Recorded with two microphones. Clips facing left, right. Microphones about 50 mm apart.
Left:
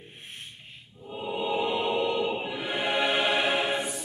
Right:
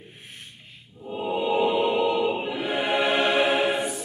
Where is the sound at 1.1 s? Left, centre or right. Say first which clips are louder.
Right 5 dB; centre.